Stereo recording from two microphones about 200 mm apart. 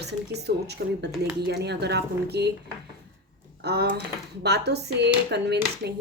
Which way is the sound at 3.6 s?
55° right (ahead or behind).